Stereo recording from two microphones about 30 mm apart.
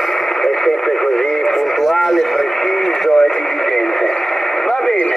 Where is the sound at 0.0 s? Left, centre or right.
Centre.